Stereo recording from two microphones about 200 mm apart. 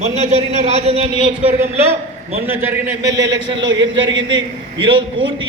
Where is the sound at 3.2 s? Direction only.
65° right (ahead or behind).